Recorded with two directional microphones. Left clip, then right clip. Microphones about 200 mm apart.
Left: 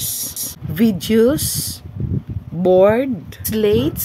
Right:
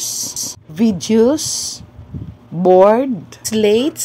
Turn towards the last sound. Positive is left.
turn(degrees=0)  # may be behind; listen again after turning